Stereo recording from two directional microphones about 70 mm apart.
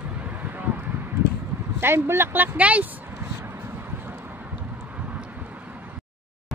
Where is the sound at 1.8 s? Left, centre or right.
Right.